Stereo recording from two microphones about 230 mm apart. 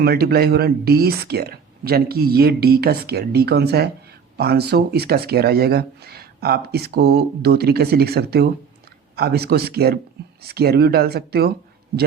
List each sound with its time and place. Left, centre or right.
0.0 s speech: right